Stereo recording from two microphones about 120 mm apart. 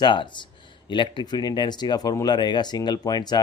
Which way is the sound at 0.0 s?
40° left (ahead or behind).